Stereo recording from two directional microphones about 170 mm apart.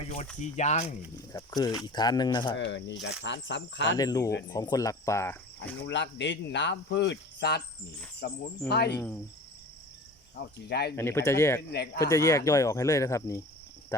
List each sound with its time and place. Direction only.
0.0 s a sound: 40° left (ahead or behind)
0.5 s speech: 40° left (ahead or behind)
1.3 s speech: 20° left (ahead or behind)
2.6 s speech: 90° left
3.9 s speech: 20° left (ahead or behind)
5.8 s speech: 90° left
8.2 s speech: 75° left (ahead or behind)
10.3 s speech: 75° left (ahead or behind)
10.9 s speech: 15° left (ahead or behind)